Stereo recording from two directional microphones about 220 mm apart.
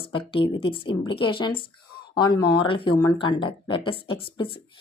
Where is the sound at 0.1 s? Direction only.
25° left (ahead or behind).